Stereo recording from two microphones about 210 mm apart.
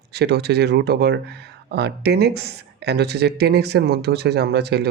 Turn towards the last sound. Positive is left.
turn(degrees=-50)  # may be behind; listen again after turning